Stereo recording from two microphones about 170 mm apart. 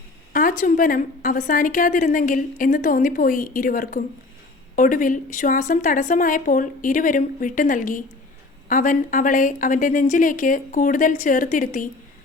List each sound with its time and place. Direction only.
0.3 s a woman's voice: 55° left (ahead or behind)